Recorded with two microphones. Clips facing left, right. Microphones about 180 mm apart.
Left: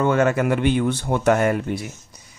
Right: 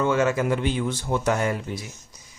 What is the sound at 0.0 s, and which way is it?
Speech, 55° left (ahead or behind).